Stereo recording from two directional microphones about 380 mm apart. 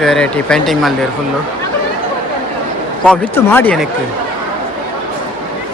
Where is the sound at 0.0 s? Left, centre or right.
Centre.